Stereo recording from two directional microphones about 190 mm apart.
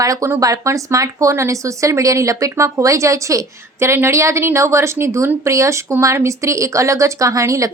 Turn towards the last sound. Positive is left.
turn(degrees=-15)  # may be behind; listen again after turning